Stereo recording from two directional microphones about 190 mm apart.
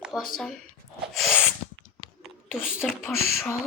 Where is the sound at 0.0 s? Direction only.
5° right (ahead or behind).